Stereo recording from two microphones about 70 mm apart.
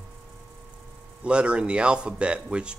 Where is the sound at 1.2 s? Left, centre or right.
Centre.